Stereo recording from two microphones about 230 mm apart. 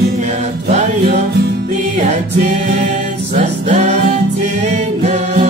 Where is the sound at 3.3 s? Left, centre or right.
Right.